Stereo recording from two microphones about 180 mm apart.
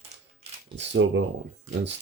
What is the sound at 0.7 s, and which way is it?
Speech, 80° right.